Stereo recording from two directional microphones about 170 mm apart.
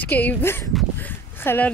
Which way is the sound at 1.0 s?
10° left (ahead or behind).